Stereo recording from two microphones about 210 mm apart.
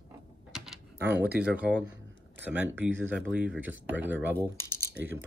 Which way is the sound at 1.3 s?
5° right (ahead or behind).